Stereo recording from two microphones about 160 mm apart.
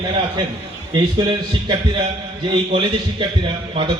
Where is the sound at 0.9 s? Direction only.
25° right (ahead or behind).